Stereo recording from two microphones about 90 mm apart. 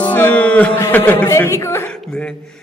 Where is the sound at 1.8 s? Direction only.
10° left (ahead or behind).